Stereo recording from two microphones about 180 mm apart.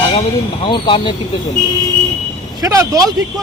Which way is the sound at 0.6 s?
25° left (ahead or behind).